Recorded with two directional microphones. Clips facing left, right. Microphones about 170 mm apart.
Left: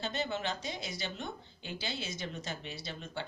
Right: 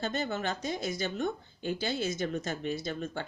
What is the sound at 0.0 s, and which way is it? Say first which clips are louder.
Speech: right 3 dB; 50° right (ahead or behind).